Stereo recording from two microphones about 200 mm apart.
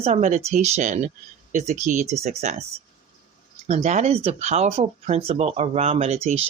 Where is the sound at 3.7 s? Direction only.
35° right (ahead or behind).